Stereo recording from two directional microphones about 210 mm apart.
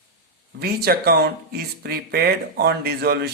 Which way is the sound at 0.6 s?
45° right (ahead or behind).